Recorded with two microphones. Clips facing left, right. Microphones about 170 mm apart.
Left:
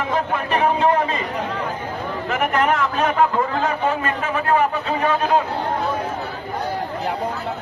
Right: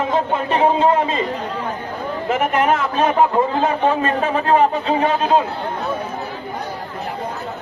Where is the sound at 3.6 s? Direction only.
30° right (ahead or behind).